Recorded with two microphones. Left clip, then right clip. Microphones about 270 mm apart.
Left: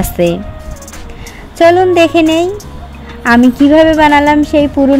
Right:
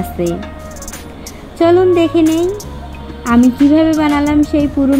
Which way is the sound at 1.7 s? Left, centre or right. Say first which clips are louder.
Left 2 dB; left.